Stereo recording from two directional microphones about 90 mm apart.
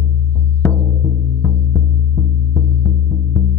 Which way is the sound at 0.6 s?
25° left (ahead or behind).